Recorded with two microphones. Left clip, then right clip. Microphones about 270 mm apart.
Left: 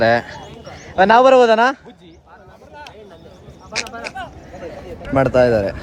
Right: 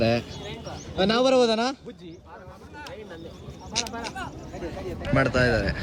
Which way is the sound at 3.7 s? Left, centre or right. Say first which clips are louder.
Left 5 dB; centre.